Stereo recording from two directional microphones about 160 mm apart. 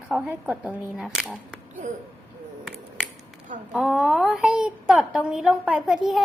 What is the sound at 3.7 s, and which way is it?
A woman's voice, centre (ahead or behind).